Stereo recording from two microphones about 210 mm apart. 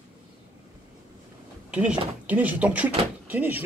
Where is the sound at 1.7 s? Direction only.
5° right (ahead or behind).